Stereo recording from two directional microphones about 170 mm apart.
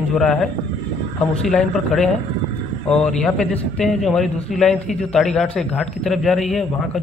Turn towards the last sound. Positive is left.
turn(degrees=0)  # may be behind; listen again after turning